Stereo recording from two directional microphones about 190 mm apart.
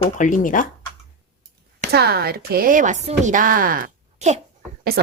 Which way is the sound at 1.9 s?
55° right (ahead or behind).